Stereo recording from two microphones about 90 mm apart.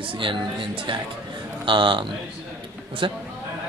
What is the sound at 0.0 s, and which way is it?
Speech, 70° right (ahead or behind).